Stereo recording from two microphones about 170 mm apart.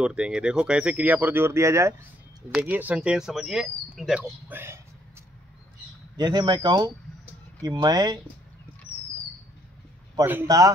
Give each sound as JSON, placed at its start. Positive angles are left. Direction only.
{"t": 0.0, "sound": "speech", "side_deg": -5}
{"t": 6.1, "sound": "speech", "side_deg": -25}
{"t": 10.1, "sound": "speech", "side_deg": -10}